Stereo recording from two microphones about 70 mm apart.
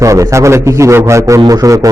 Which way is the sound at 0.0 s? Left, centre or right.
Right.